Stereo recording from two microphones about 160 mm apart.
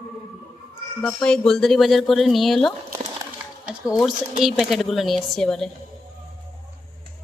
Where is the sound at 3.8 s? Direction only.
20° left (ahead or behind).